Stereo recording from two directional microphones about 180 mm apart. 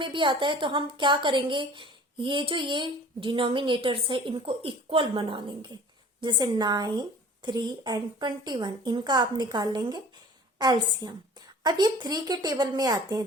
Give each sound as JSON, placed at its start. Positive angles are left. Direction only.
{"t": 0.0, "sound": "a woman's voice", "side_deg": -25}